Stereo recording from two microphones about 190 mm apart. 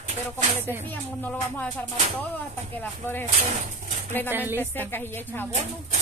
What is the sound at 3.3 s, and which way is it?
Speech, 40° right (ahead or behind).